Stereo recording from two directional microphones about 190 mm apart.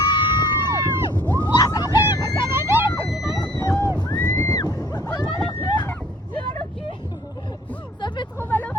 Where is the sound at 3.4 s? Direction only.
20° left (ahead or behind).